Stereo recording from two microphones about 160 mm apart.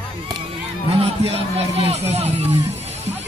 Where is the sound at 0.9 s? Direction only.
40° right (ahead or behind).